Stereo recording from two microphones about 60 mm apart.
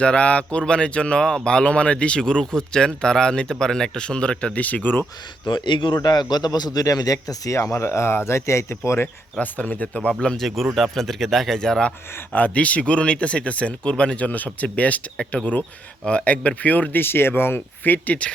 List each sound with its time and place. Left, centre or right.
0.0 s speech: centre
6.5 s speech: left
9.4 s speech: left
10.4 s speech: centre
12.3 s speech: left